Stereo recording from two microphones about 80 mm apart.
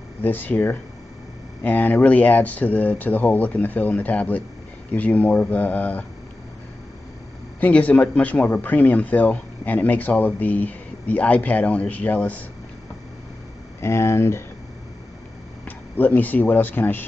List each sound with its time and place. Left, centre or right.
0.2 s speech: left
7.6 s speech: centre
13.7 s speech: left
15.6 s speech: left